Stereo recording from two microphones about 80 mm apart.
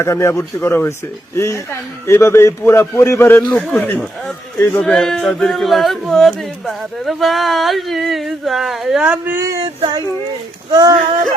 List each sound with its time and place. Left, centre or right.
0.0 s a man's voice: left
3.7 s speech: centre
9.2 s speech: right
10.7 s speech: right